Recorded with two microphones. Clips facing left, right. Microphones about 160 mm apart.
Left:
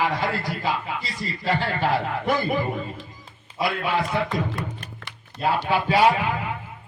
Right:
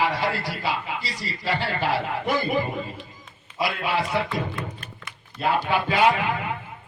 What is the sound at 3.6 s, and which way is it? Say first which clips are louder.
A man's voice: left 1 dB; 45° left (ahead or behind).